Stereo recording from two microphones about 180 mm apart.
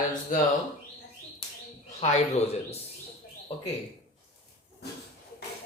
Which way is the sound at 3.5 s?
35° left (ahead or behind).